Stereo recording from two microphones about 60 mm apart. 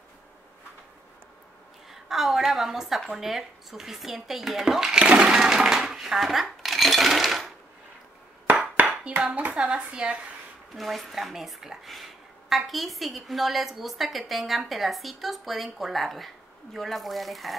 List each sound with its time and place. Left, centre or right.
1.9 s a woman's voice: centre
4.9 s a sound: centre
8.7 s a sound: right
9.3 s speech: right
9.6 s speech: centre
10.7 s speech: centre